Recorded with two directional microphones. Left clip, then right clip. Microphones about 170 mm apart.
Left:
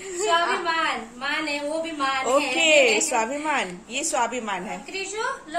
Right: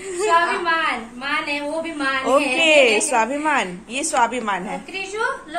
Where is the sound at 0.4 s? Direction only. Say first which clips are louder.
Right 4 dB; 90° left.